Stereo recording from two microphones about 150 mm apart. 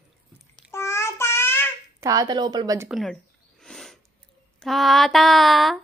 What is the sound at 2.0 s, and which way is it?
Speech, 25° right (ahead or behind).